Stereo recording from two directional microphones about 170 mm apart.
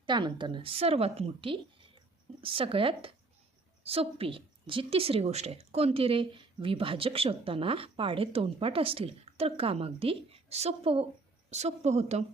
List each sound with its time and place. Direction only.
0.0 s a woman's voice: 25° right (ahead or behind)